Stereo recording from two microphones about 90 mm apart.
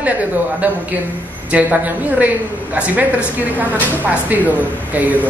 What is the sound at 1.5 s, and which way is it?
Speech, 20° right (ahead or behind).